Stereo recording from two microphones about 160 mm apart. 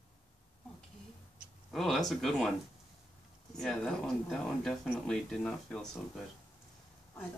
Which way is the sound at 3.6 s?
5° left (ahead or behind).